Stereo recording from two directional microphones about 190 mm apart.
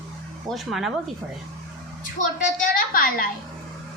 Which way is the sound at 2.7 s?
45° left (ahead or behind).